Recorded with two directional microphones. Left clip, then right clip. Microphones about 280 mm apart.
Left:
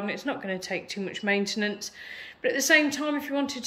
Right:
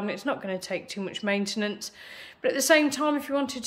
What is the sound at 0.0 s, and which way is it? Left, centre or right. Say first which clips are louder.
Speech: right 1 dB; centre.